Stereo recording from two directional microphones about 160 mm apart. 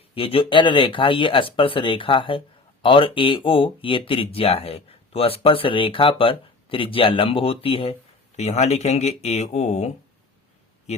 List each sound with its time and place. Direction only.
0.1 s speech: 35° left (ahead or behind)